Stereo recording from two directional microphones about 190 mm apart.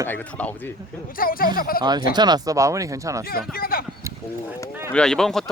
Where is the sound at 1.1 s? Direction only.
50° left (ahead or behind).